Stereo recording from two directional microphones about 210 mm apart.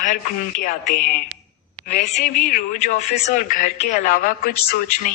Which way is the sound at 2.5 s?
35° left (ahead or behind).